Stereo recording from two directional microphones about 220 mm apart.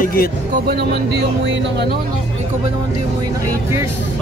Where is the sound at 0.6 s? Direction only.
50° right (ahead or behind).